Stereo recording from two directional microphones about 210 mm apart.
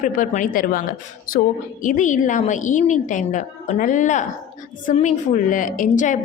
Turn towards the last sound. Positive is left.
turn(degrees=35)  # may be behind; listen again after turning